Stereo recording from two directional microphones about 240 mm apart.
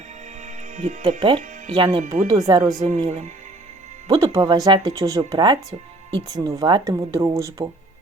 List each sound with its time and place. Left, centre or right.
0.4 s speech: right
2.1 s speech: right
4.1 s speech: centre